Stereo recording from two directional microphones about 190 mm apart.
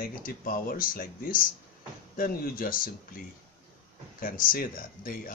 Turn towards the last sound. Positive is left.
turn(degrees=50)  # may be behind; listen again after turning